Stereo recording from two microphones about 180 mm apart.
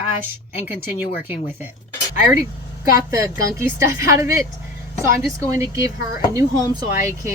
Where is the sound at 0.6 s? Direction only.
10° right (ahead or behind).